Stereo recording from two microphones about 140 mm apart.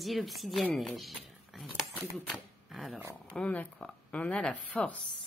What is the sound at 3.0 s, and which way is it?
Speech, 15° right (ahead or behind).